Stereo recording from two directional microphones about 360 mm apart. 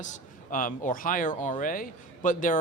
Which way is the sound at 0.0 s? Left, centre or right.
Left.